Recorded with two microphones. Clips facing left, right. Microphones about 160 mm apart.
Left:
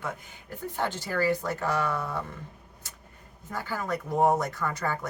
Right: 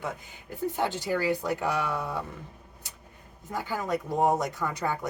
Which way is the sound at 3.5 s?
15° right (ahead or behind).